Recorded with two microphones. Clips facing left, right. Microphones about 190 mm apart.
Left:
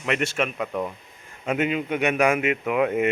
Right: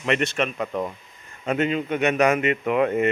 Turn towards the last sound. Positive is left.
turn(degrees=5)  # may be behind; listen again after turning